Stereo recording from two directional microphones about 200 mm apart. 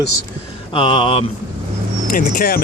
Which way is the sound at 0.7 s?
25° left (ahead or behind).